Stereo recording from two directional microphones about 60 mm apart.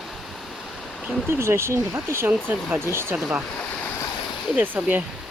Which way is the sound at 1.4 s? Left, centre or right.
Right.